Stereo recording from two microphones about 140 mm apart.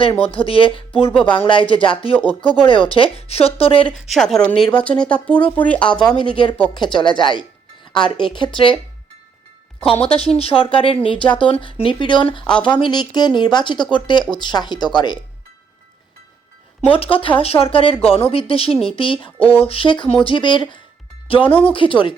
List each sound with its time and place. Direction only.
0.2 s speech: 40° left (ahead or behind)
3.9 s speech: centre (ahead or behind)
6.1 s speech: 35° left (ahead or behind)
10.0 s speech: 45° left (ahead or behind)
12.5 s speech: 5° left (ahead or behind)
12.7 s speech: 30° left (ahead or behind)
16.9 s speech: 40° left (ahead or behind)